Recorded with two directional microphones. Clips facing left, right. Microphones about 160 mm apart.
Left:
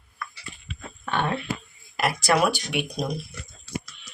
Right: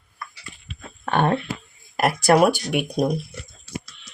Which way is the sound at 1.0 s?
45° right (ahead or behind).